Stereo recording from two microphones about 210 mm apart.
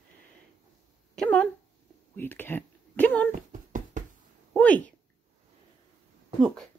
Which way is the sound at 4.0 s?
40° right (ahead or behind).